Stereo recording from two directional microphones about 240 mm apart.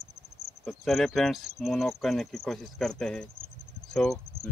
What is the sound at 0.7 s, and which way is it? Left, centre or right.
Speech, centre.